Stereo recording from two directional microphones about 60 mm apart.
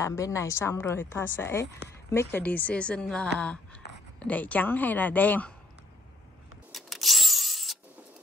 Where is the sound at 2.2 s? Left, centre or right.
Left.